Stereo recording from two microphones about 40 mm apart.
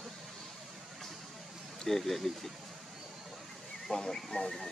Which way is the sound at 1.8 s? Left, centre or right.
Centre.